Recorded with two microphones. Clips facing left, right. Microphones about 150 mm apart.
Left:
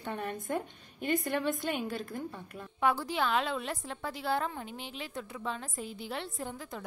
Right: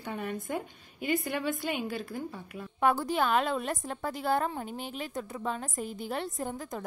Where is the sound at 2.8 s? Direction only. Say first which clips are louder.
Right 3 dB; 50° right (ahead or behind).